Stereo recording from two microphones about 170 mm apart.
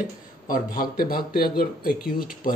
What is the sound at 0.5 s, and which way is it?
A man's voice, 60° left (ahead or behind).